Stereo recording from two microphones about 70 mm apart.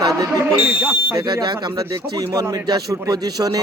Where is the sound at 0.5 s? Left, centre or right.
Right.